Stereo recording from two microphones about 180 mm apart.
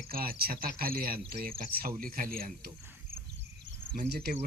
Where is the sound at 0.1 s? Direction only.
55° right (ahead or behind).